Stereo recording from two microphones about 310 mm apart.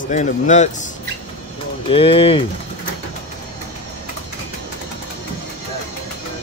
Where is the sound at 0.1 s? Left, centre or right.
Left.